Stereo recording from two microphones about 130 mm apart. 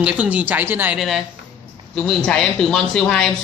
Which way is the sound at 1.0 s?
Centre (ahead or behind).